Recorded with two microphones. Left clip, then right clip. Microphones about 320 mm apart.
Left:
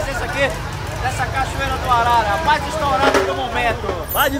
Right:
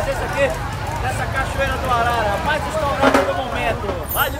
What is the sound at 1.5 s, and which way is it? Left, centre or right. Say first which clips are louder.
Speech: left 2 dB; centre.